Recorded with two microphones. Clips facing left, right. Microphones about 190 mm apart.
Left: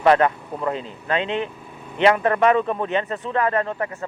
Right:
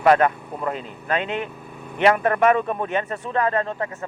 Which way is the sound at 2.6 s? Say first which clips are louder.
Left 2 dB; 10° right (ahead or behind).